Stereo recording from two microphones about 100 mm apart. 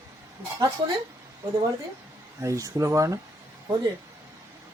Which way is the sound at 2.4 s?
35° right (ahead or behind).